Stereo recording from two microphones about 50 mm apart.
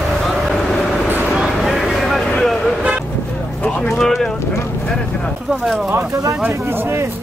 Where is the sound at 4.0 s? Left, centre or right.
Centre.